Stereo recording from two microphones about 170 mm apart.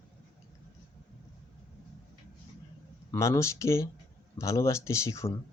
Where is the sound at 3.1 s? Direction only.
20° left (ahead or behind).